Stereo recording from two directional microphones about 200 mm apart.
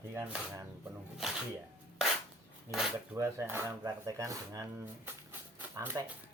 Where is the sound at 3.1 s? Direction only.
15° right (ahead or behind).